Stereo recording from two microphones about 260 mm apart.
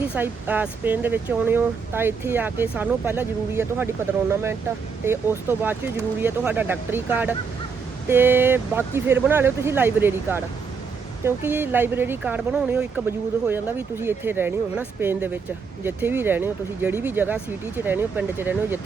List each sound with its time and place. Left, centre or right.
0.1 s speech: centre
5.0 s speech: centre
11.4 s speech: centre